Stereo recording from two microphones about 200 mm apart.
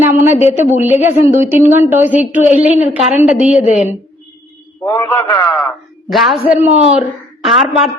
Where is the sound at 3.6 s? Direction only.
35° left (ahead or behind).